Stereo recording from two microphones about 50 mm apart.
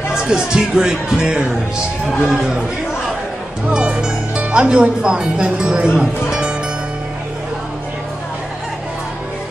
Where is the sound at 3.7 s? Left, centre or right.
Centre.